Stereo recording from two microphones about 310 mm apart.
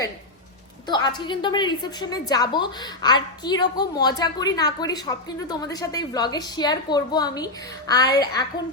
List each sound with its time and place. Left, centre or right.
0.9 s a woman's voice: centre